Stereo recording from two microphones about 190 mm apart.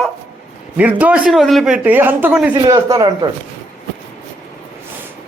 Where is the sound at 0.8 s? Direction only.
10° right (ahead or behind).